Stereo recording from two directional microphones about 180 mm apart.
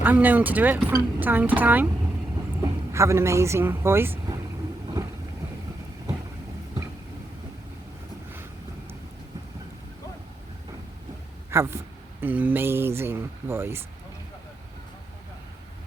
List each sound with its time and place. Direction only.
0.0 s speech: 10° right (ahead or behind)
11.5 s speech: 15° right (ahead or behind)